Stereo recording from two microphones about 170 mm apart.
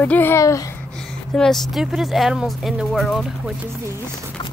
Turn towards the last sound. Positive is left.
turn(degrees=0)  # may be behind; listen again after turning